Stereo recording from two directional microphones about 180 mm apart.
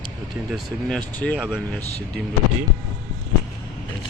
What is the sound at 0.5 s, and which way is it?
Speech, 5° left (ahead or behind).